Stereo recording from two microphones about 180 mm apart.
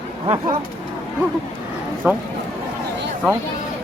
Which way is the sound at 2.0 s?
10° right (ahead or behind).